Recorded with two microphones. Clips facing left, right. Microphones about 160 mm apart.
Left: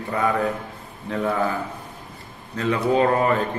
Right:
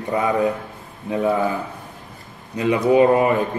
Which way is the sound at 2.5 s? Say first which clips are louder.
Right 4 dB; 15° right (ahead or behind).